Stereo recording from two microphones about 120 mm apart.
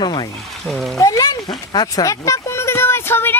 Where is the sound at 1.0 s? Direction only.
30° left (ahead or behind).